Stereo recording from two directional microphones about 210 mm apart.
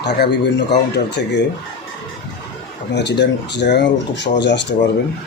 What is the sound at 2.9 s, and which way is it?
Speech, 55° left (ahead or behind).